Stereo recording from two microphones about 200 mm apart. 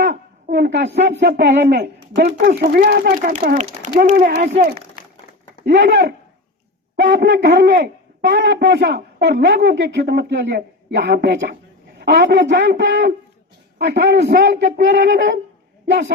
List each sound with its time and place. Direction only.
0.0 s speech: 60° right (ahead or behind)
2.5 s speech: 45° right (ahead or behind)
5.6 s a woman's voice: 60° right (ahead or behind)